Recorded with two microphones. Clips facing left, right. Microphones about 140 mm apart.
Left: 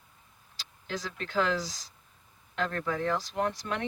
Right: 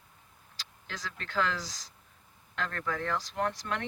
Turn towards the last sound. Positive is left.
turn(degrees=15)  # may be behind; listen again after turning